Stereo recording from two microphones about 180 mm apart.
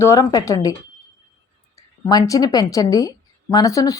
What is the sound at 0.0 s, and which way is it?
Speech, 20° left (ahead or behind).